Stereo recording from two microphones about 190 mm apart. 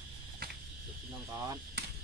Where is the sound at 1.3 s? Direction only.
15° right (ahead or behind).